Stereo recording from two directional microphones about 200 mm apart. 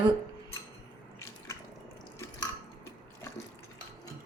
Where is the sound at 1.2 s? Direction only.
15° left (ahead or behind).